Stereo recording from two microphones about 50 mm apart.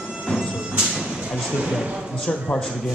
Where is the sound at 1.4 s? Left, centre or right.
Centre.